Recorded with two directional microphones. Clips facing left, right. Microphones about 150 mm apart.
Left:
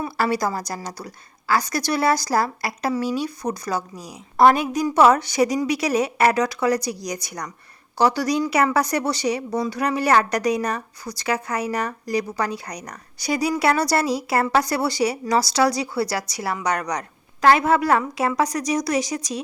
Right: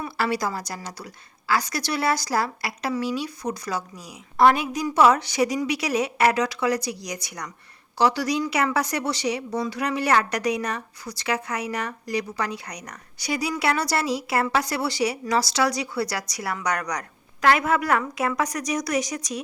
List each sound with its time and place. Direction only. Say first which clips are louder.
0.0 s a woman's voice: left 3 dB; 45° left (ahead or behind)